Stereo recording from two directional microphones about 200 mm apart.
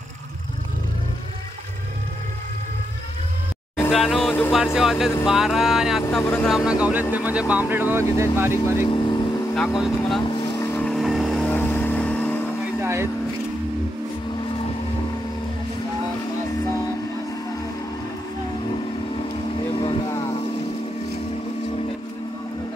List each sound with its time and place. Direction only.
3.7 s music: centre (ahead or behind)
4.7 s speech: centre (ahead or behind)
6.5 s speech: 5° right (ahead or behind)
8.8 s speech: 20° left (ahead or behind)
9.5 s speech: centre (ahead or behind)
10.3 s vehicle: 20° left (ahead or behind)
12.8 s vehicle: 10° right (ahead or behind)
19.8 s vehicle: 25° left (ahead or behind)